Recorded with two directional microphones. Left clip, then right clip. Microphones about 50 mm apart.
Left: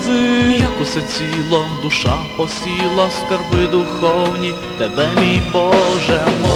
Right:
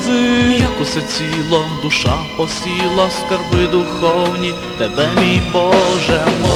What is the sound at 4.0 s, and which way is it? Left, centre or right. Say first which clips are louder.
Music: right 1 dB; centre.